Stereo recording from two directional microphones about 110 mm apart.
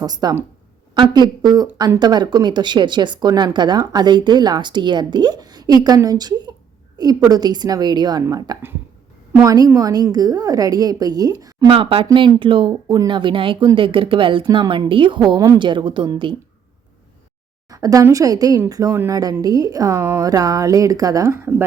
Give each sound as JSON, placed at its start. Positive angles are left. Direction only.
{"t": 0.0, "sound": "speech", "side_deg": -35}
{"t": 11.7, "sound": "speech", "side_deg": -60}
{"t": 17.7, "sound": "speech", "side_deg": -30}